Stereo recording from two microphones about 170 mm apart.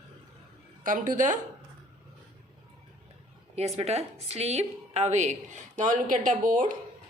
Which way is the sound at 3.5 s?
40° right (ahead or behind).